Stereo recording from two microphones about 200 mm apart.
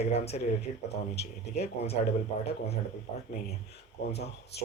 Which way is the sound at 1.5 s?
30° left (ahead or behind).